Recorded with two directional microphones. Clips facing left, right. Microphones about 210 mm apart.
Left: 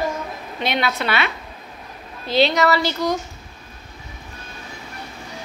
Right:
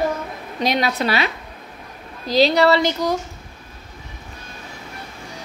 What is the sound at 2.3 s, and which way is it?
Speech, 35° right (ahead or behind).